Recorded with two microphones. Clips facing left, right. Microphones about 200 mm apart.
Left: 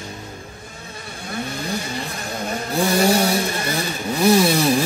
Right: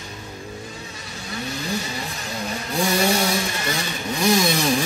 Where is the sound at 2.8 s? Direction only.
35° left (ahead or behind).